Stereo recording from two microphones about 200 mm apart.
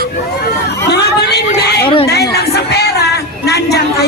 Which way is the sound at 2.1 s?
55° left (ahead or behind).